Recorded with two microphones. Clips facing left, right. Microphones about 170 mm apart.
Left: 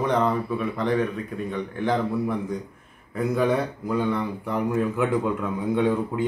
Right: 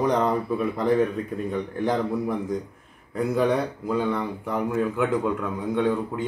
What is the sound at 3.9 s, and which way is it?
A man's voice, 5° right (ahead or behind).